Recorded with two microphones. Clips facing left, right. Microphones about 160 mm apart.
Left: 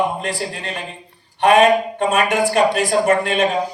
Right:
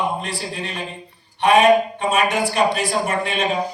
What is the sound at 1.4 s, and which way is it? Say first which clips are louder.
A man's voice: left 1 dB; 50° left (ahead or behind).